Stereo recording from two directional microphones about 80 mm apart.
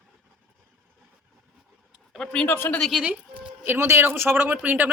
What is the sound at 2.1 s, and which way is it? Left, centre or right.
Speech, centre.